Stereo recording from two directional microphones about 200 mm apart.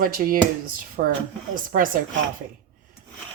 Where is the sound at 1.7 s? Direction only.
45° right (ahead or behind).